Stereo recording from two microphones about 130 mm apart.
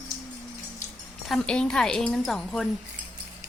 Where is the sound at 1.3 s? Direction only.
5° left (ahead or behind).